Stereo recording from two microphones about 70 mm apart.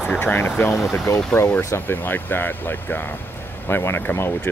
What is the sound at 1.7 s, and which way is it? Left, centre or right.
Speech, left.